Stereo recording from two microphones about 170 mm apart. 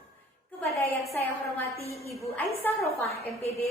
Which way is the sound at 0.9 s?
15° left (ahead or behind).